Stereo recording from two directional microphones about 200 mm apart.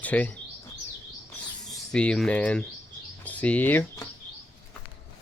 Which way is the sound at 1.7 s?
Centre (ahead or behind).